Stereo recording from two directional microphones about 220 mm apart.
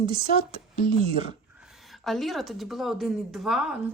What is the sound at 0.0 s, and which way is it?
Speech, 20° right (ahead or behind).